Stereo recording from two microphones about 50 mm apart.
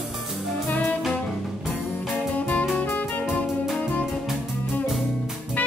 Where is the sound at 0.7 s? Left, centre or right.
Left.